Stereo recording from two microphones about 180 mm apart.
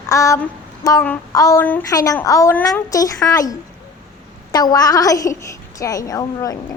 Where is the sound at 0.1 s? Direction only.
15° left (ahead or behind).